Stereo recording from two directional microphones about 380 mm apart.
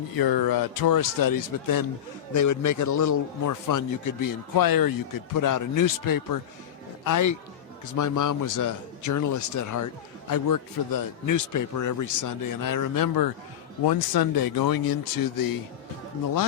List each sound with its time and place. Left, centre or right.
0.2 s a man's voice: left